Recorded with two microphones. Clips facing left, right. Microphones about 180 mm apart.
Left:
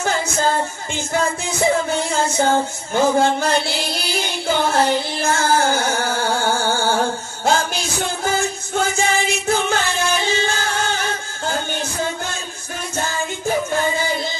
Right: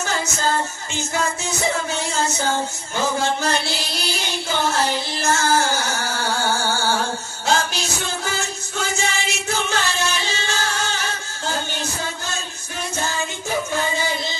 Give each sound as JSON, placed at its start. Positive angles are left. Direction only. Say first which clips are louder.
{"t": 2.0, "sound": "music", "louder": "left 4 dB", "side_deg": 55}